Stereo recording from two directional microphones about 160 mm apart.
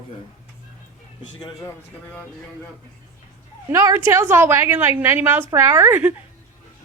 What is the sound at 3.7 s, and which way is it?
A woman's voice, 15° right (ahead or behind).